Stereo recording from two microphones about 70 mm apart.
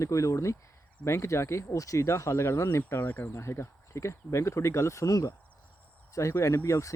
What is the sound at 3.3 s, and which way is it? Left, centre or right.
Speech, left.